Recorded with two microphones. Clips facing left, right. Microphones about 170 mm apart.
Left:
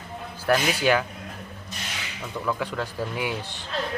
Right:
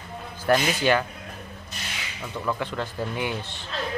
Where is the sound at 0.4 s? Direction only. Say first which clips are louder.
Right 1 dB; 5° left (ahead or behind).